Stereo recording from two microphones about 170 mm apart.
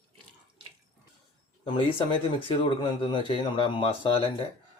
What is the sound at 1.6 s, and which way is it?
Speech, 30° left (ahead or behind).